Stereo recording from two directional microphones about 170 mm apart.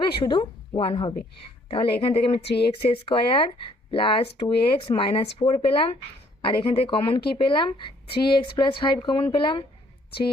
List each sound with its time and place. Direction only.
0.2 s a woman's voice: 30° left (ahead or behind)
2.4 s speech: 85° left
2.9 s speech: 35° left (ahead or behind)